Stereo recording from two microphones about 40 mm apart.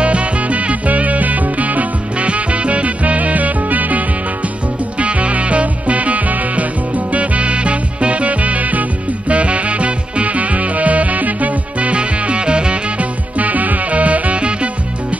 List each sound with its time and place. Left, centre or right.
0.0 s music: right
13.4 s music: right